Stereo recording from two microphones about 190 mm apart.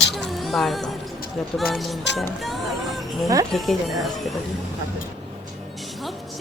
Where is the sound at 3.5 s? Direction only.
Centre (ahead or behind).